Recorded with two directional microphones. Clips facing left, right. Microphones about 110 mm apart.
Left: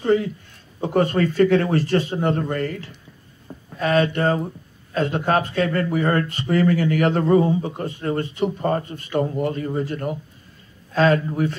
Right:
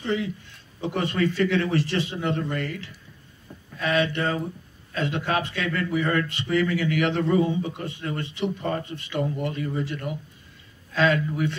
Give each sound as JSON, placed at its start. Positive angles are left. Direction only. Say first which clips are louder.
{"t": 0.0, "sound": "a man's voice", "louder": "left 7 dB", "side_deg": 45}